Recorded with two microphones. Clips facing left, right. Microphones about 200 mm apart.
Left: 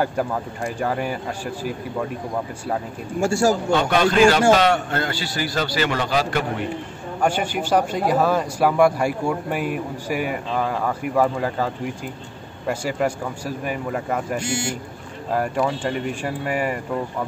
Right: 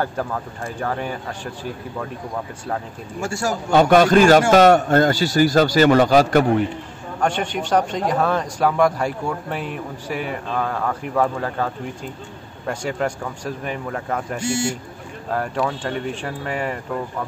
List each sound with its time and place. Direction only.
0.0 s a man's voice: 10° left (ahead or behind)
3.2 s a man's voice: 30° left (ahead or behind)
3.7 s a man's voice: 45° right (ahead or behind)
7.2 s a man's voice: 5° left (ahead or behind)